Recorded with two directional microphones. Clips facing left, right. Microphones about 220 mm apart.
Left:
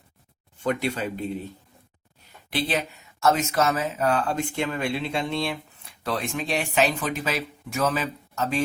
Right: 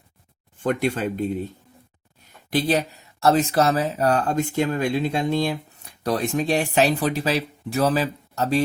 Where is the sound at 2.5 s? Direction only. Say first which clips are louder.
Right 5 dB; 40° right (ahead or behind).